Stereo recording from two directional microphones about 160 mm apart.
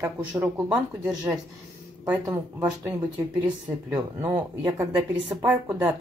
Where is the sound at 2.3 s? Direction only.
20° right (ahead or behind).